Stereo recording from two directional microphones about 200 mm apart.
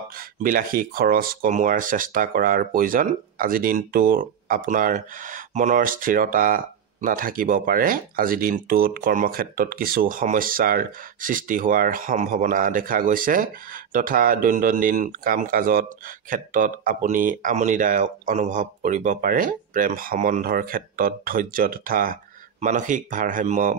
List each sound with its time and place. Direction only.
0.4 s speech: 45° right (ahead or behind)